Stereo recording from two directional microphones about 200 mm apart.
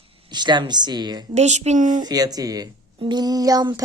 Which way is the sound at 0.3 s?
20° right (ahead or behind).